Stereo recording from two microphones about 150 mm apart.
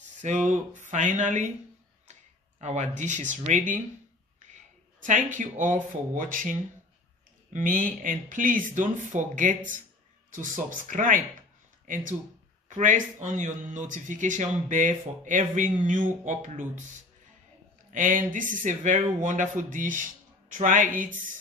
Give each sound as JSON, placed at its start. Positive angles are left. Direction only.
{"t": 0.5, "sound": "a man's voice", "side_deg": -55}
{"t": 2.6, "sound": "a man's voice", "side_deg": -50}
{"t": 5.0, "sound": "a man's voice", "side_deg": -55}
{"t": 17.9, "sound": "a man's voice", "side_deg": -60}